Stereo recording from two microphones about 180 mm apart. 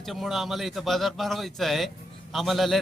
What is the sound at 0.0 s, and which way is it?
A man's voice, centre (ahead or behind).